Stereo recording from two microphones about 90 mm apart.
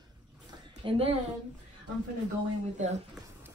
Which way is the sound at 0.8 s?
90° right.